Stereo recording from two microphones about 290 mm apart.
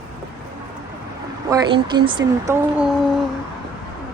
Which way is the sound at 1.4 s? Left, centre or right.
Centre.